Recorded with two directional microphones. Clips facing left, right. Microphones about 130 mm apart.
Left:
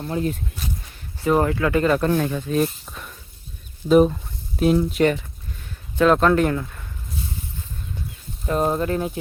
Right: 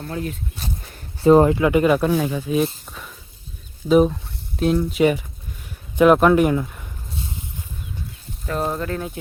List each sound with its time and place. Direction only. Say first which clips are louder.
0.0 s speech: left 3 dB; 25° left (ahead or behind)
1.2 s speech: right 6 dB; 25° right (ahead or behind)
8.4 s speech: left 3 dB; 15° left (ahead or behind)